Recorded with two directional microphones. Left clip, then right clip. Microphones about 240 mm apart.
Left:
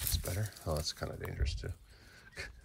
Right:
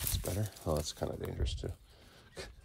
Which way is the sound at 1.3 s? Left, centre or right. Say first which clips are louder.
Right 2 dB; centre.